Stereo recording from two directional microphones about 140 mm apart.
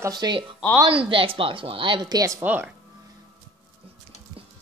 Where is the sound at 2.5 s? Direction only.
10° right (ahead or behind).